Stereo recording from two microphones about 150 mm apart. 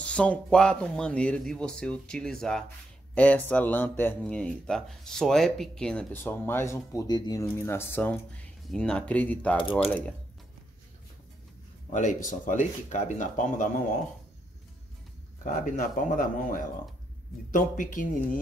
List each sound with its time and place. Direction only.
0.0 s speech: 5° left (ahead or behind)
11.9 s speech: 55° left (ahead or behind)
15.4 s speech: 60° left (ahead or behind)